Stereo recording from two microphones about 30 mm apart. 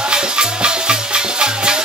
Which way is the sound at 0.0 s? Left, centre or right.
Right.